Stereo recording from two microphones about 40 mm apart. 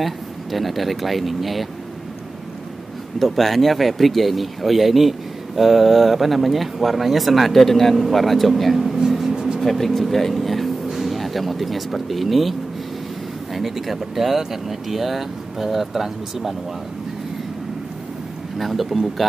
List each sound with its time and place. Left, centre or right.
0.0 s speech: centre
3.2 s speech: centre
9.3 s vehicle: centre
9.6 s speech: centre
18.6 s speech: centre